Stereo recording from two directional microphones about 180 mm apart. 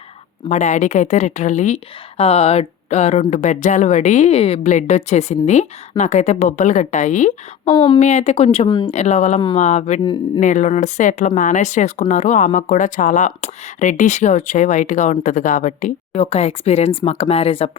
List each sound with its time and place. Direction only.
0.4 s a woman's voice: 40° left (ahead or behind); by 8.9 s 25° left (ahead or behind)
8.9 s a woman's voice: 35° left (ahead or behind)
10.0 s speech: 25° left (ahead or behind)
10.4 s a woman's voice: 45° left (ahead or behind)